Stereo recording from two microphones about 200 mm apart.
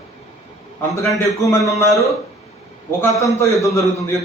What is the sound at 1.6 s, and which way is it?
Speech, 15° left (ahead or behind).